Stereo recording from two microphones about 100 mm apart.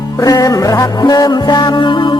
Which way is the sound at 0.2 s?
35° left (ahead or behind).